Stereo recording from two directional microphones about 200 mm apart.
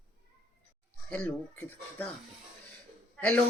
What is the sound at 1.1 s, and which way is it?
Speech, 5° left (ahead or behind).